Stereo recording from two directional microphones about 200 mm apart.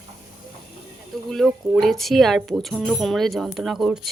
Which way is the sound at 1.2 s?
Centre (ahead or behind).